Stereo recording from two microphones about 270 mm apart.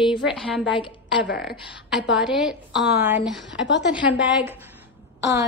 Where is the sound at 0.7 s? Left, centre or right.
Centre.